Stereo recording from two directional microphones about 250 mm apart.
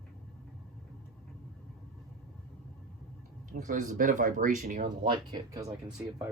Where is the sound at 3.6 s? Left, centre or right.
Right.